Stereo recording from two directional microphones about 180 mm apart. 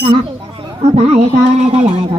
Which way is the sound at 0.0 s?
30° right (ahead or behind).